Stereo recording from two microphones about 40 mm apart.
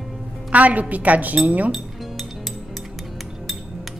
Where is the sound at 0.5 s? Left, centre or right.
Right.